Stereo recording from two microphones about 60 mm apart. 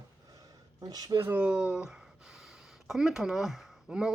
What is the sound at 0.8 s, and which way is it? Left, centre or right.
Speech, right.